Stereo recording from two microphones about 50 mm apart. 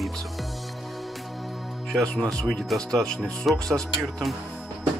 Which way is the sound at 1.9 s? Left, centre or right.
Centre.